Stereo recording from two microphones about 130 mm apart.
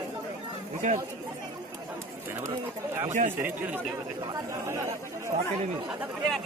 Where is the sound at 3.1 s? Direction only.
70° right (ahead or behind).